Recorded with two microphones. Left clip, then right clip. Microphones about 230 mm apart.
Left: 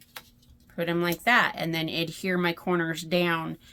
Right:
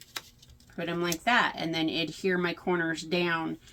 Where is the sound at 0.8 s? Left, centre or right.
Left.